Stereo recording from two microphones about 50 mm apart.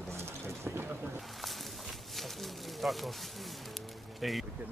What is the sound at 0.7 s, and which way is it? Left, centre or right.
Boat, right.